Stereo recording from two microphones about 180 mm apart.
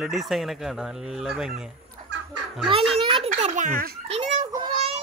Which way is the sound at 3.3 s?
45° right (ahead or behind).